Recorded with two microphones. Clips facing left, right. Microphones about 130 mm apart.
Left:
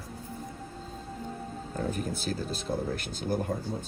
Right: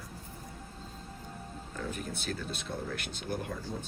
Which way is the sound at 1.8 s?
40° left (ahead or behind).